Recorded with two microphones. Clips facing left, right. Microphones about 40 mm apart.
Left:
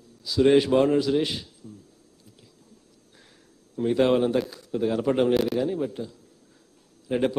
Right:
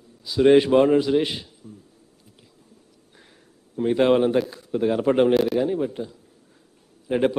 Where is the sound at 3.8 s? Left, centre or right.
Centre.